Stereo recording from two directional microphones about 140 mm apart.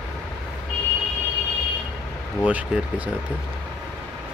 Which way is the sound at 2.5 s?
10° right (ahead or behind).